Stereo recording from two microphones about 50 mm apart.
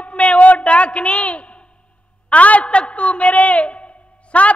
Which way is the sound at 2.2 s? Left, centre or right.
Left.